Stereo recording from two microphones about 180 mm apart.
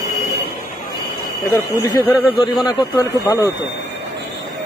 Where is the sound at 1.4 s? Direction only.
20° left (ahead or behind).